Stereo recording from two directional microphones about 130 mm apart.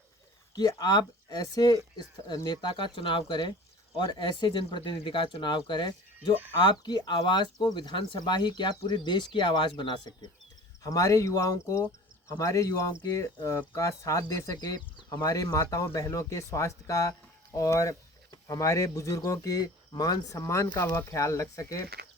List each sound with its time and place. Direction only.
0.8 s speech: 30° left (ahead or behind)
6.1 s speech: 15° right (ahead or behind)
6.6 s speech: 35° left (ahead or behind)